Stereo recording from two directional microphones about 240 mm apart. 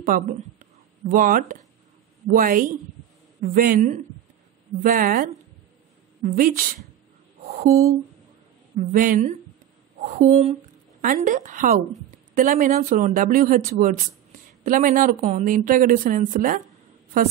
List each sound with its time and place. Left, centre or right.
0.0 s speech: right
7.4 s a sound: right
8.7 s a woman's voice: right